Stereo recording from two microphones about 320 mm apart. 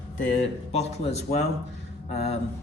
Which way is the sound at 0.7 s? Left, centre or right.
Centre.